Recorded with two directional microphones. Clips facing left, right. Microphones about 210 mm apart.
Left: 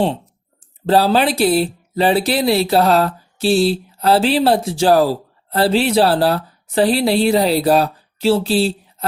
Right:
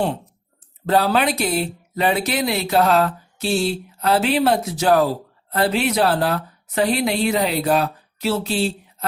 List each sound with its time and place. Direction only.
0.9 s speech: 30° left (ahead or behind)